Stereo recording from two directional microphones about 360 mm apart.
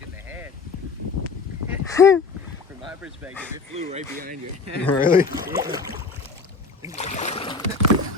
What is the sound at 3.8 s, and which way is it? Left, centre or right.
Speech, right.